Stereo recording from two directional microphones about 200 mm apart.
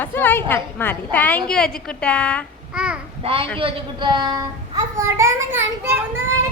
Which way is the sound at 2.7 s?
5° right (ahead or behind).